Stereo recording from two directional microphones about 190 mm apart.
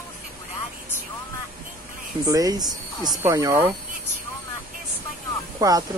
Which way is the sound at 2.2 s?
20° right (ahead or behind).